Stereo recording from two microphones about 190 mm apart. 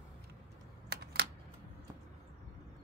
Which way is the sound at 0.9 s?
60° right (ahead or behind).